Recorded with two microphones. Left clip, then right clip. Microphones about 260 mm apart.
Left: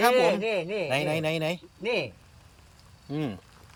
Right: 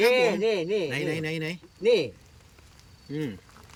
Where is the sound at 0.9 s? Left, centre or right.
Centre.